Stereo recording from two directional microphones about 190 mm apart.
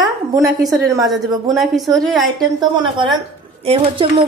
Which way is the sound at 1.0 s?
Centre (ahead or behind).